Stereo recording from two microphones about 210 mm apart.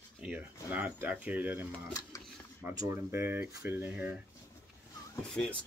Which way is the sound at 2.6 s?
15° right (ahead or behind).